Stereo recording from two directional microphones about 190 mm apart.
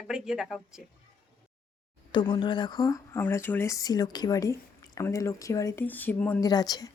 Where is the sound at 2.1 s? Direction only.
25° left (ahead or behind).